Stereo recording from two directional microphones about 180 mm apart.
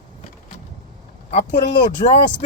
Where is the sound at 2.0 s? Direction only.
40° left (ahead or behind).